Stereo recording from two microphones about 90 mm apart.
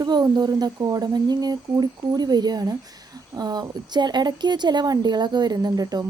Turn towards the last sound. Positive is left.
turn(degrees=-45)  # may be behind; listen again after turning